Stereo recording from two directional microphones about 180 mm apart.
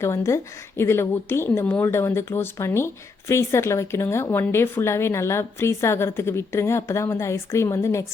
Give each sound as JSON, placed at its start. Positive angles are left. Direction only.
{"t": 0.0, "sound": "speech", "side_deg": 15}